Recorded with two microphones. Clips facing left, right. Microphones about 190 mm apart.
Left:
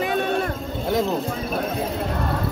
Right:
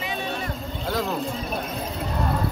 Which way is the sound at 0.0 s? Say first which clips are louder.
Left 8 dB; 55° left (ahead or behind).